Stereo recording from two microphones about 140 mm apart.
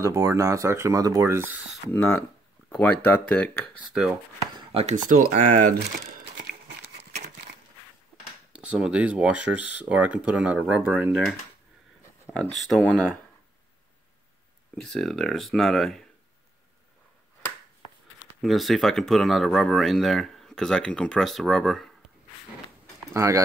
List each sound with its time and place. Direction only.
0.0 s speech: 20° right (ahead or behind)
1.9 s speech: 15° left (ahead or behind)
3.9 s speech: 5° right (ahead or behind)
4.9 s speech: 70° right (ahead or behind); by 6.5 s 90° right
8.5 s speech: 5° right (ahead or behind)
12.4 s speech: centre (ahead or behind)
14.8 s speech: centre (ahead or behind)
18.4 s speech: centre (ahead or behind)
23.1 s speech: 20° right (ahead or behind)